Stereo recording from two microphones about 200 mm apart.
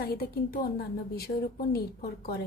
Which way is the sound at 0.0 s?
50° left (ahead or behind).